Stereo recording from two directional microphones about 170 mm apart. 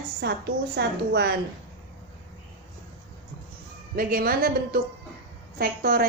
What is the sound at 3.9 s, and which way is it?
A woman's voice, 60° right (ahead or behind).